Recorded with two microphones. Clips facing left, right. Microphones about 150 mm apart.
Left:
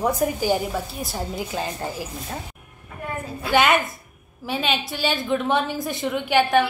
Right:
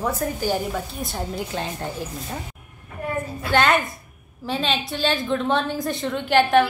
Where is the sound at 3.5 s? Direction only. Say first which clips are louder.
Left 1 dB; 5° left (ahead or behind).